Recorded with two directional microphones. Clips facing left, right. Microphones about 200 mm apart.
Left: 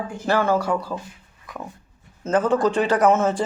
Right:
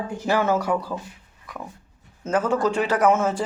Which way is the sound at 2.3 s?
10° right (ahead or behind).